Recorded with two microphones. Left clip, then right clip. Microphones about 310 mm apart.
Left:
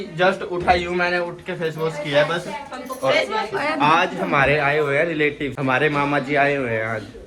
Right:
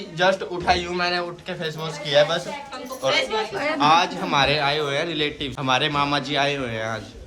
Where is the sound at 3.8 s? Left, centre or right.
Centre.